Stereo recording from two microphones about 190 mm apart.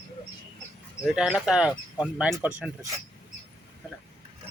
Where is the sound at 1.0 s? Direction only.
5° right (ahead or behind).